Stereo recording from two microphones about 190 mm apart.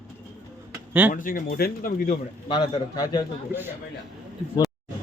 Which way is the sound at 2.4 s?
20° left (ahead or behind).